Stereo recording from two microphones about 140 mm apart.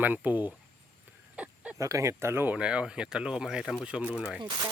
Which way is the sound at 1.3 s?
10° right (ahead or behind).